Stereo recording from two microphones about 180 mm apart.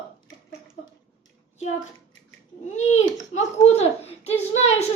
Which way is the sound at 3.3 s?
35° left (ahead or behind).